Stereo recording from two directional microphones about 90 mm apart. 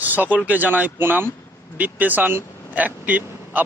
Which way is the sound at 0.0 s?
20° right (ahead or behind).